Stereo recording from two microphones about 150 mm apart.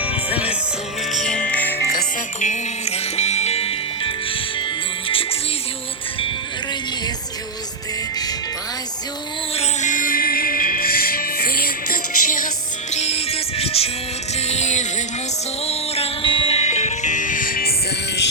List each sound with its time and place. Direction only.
0.0 s music: 10° right (ahead or behind)
1.1 s music: 5° left (ahead or behind)
2.4 s music: 50° left (ahead or behind)
9.6 s music: 55° left (ahead or behind)
12.9 s music: 45° left (ahead or behind); by 17.7 s 80° left